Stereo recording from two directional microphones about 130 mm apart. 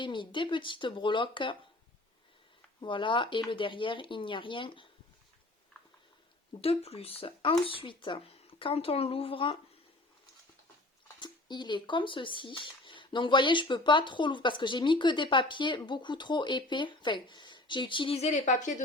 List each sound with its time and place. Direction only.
0.0 s speech: 40° left (ahead or behind)
2.8 s speech: 40° left (ahead or behind)
6.6 s speech: 50° left (ahead or behind)
11.2 s speech: 35° left (ahead or behind)
18.2 s speech: 65° left (ahead or behind)